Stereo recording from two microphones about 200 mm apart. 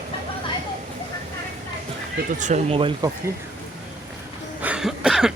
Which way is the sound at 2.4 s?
35° right (ahead or behind).